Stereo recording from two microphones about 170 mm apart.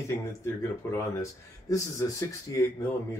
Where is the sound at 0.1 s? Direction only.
15° left (ahead or behind).